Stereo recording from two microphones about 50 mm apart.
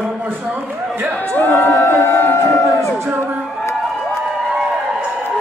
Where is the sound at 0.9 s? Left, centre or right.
Right.